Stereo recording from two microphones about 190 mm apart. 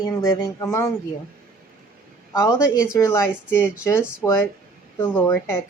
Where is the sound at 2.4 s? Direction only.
20° left (ahead or behind).